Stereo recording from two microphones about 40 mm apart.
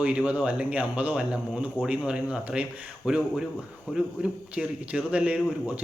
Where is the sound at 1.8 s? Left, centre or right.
Left.